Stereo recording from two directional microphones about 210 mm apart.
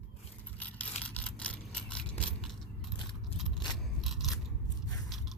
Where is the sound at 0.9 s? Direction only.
30° left (ahead or behind).